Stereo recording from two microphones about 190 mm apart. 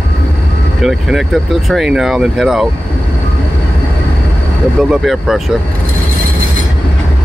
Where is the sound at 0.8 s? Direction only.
Centre (ahead or behind).